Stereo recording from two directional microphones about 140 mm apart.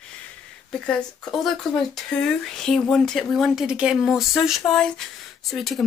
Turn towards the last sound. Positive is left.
turn(degrees=0)  # may be behind; listen again after turning